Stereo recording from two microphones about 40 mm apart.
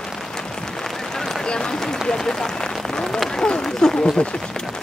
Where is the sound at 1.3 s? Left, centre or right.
Centre.